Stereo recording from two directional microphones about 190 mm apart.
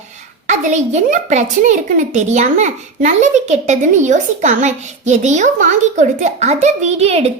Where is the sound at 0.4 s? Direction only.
40° right (ahead or behind).